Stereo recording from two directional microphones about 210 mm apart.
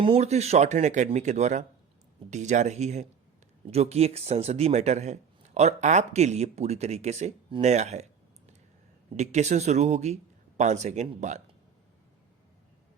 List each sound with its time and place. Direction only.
0.0 s speech: 30° right (ahead or behind)